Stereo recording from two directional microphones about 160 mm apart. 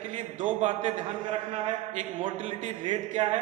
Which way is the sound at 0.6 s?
45° right (ahead or behind).